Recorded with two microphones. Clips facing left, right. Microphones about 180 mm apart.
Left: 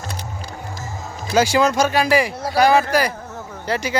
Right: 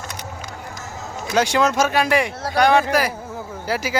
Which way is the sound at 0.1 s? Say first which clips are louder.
Left 1 dB; 30° left (ahead or behind).